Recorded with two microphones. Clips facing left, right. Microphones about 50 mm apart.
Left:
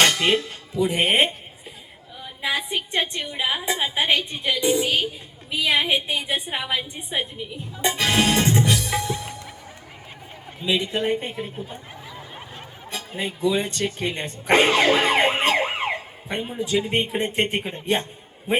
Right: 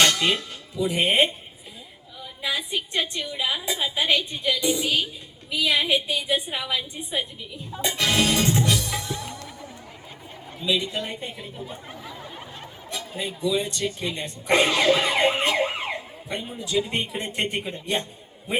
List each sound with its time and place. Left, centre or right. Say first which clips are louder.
0.0 s music: left 1 dB; left
0.8 s a woman's voice: left 3 dB; left
2.5 s a woman's voice: left 2 dB; left
7.9 s music: left 2 dB; left
10.6 s a woman's voice: left 3 dB; left
12.9 s a woman's voice: left 2 dB; left